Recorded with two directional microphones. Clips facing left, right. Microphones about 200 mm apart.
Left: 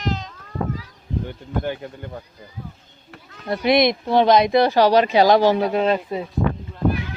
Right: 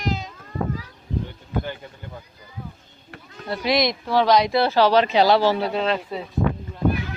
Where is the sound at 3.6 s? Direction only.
55° left (ahead or behind).